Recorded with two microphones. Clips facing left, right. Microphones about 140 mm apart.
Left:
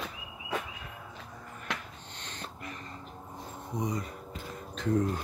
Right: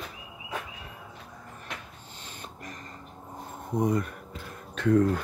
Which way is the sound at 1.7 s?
90° left.